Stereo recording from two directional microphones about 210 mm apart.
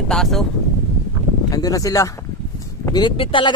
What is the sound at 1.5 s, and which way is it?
Speech, 15° left (ahead or behind).